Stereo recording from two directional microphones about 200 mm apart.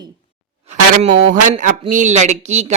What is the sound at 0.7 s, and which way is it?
A woman's voice, 30° right (ahead or behind).